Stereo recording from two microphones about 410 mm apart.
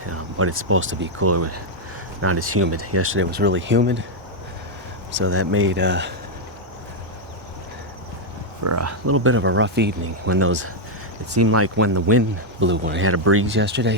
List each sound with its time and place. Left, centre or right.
0.0 s speech: right
5.1 s speech: right
8.6 s speech: right